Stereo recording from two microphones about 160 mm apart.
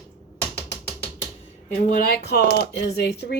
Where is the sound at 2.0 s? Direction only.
80° left.